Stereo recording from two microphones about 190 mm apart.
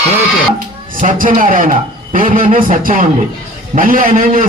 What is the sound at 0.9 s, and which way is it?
A man's voice, 45° right (ahead or behind).